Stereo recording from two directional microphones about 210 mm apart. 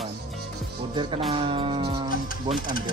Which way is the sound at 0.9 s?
20° right (ahead or behind).